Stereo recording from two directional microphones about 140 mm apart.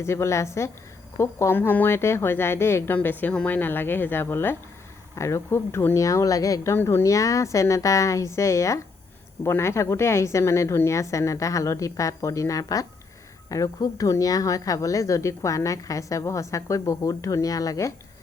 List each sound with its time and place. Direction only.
0.0 s speech: 20° left (ahead or behind)